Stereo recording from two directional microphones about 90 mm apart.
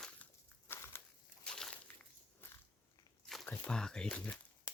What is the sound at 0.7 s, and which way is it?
Crushing, 30° left (ahead or behind).